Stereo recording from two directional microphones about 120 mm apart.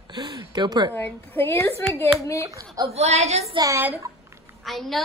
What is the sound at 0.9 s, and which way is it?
Speech, 15° left (ahead or behind).